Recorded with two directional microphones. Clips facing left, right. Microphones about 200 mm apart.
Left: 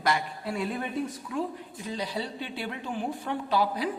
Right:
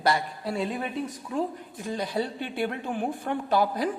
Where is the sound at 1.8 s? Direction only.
50° right (ahead or behind).